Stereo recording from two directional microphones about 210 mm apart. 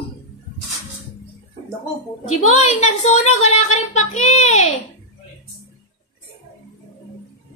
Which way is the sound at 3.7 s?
35° left (ahead or behind).